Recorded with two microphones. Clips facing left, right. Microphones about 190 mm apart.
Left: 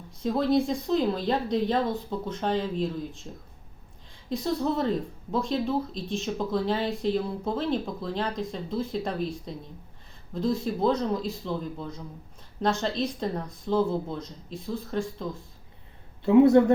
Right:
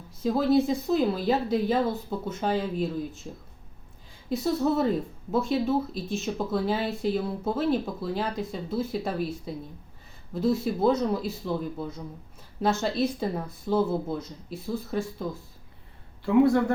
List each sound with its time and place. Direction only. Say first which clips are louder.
0.2 s speech: right 2 dB; 5° right (ahead or behind)
4.3 s speech: right 2 dB; 5° right (ahead or behind)
16.2 s speech: left 4 dB; 20° left (ahead or behind)